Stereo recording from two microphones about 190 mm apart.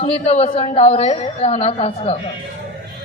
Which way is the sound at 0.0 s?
35° left (ahead or behind).